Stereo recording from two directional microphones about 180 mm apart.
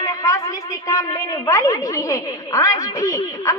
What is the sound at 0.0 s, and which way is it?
A woman's voice, 20° left (ahead or behind).